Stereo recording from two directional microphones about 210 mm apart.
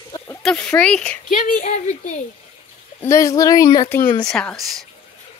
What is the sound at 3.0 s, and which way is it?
Speech, 15° left (ahead or behind).